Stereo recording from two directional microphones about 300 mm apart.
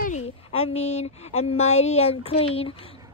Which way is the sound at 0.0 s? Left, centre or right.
Left.